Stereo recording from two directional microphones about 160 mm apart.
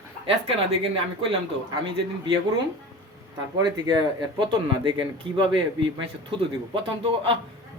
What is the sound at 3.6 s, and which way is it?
Speech, 25° right (ahead or behind).